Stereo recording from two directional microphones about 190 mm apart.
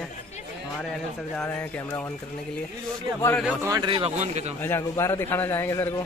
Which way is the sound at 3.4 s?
15° right (ahead or behind).